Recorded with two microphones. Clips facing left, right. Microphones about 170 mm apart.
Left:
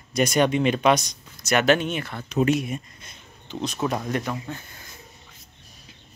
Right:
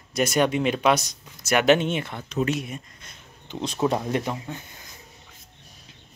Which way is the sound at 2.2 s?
15° left (ahead or behind).